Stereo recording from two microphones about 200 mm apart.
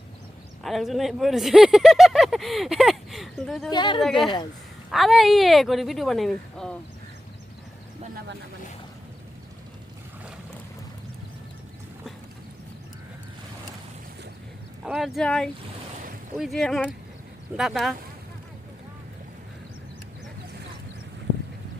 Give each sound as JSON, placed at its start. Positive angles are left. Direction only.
{"t": 0.6, "sound": "speech", "side_deg": 0}
{"t": 3.7, "sound": "speech", "side_deg": 20}
{"t": 4.0, "sound": "speech", "side_deg": 0}
{"t": 14.8, "sound": "speech", "side_deg": 0}